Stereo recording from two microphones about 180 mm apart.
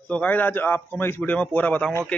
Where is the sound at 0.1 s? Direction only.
10° left (ahead or behind).